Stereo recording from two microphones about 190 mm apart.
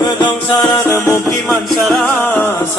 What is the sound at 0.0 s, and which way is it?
Music, 25° left (ahead or behind).